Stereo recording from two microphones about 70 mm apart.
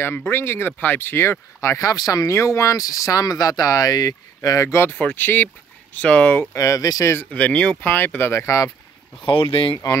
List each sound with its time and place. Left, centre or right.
0.0 s speech: left
2.2 s speech: left
4.8 s speech: left
6.5 s speech: left
7.3 s speech: centre
7.8 s speech: left
8.3 s speech: left